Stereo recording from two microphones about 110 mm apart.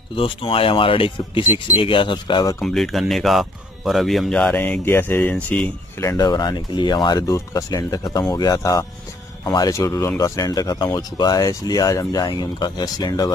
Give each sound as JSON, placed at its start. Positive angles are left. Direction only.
{"t": 0.1, "sound": "speech", "side_deg": 55}
{"t": 2.6, "sound": "speech", "side_deg": 5}
{"t": 6.1, "sound": "speech", "side_deg": 40}
{"t": 7.2, "sound": "speech", "side_deg": 30}